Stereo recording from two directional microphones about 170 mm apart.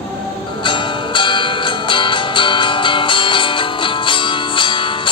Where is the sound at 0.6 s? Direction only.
30° left (ahead or behind).